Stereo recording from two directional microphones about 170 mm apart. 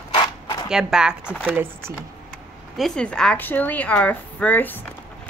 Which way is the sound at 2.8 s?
5° left (ahead or behind).